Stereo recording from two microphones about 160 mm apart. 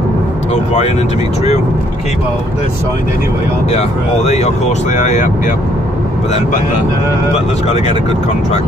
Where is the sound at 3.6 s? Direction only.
45° left (ahead or behind).